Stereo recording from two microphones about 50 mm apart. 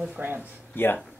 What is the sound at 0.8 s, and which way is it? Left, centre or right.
Speech, left.